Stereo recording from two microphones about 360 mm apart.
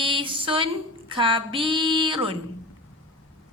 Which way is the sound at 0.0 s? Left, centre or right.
Centre.